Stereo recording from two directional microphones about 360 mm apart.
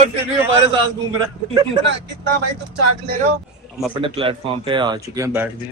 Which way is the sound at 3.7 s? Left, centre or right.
Centre.